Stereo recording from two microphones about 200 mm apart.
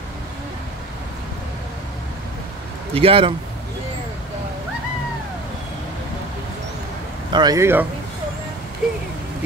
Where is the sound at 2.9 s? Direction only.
25° right (ahead or behind).